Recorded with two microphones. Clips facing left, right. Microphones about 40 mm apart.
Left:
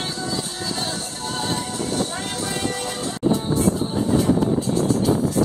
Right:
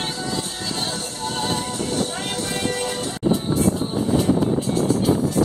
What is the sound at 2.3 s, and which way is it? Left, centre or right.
Music, centre.